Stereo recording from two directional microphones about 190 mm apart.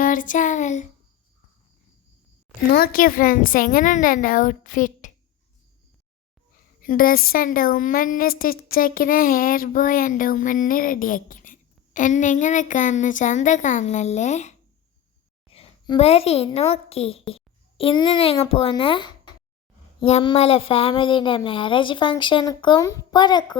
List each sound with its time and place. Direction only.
0.0 s a sound: 45° left (ahead or behind)
2.7 s a woman's voice: 50° left (ahead or behind)
6.8 s a woman's voice: 50° left (ahead or behind); by 23.6 s 25° left (ahead or behind)